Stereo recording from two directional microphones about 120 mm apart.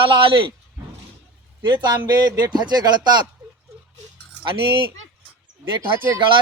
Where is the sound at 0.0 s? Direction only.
45° right (ahead or behind).